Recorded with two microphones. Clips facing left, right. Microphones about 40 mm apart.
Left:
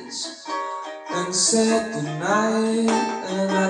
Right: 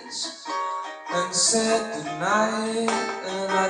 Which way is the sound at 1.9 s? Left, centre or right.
Centre.